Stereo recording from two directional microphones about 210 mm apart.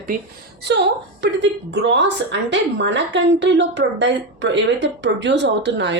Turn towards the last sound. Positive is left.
turn(degrees=-55)  # may be behind; listen again after turning